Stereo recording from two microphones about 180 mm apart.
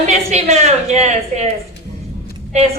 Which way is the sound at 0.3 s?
35° right (ahead or behind).